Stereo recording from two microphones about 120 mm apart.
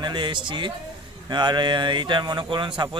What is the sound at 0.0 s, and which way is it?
Speech, 40° right (ahead or behind).